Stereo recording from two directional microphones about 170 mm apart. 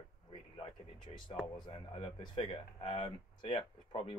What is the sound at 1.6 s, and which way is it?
Speech, 30° left (ahead or behind).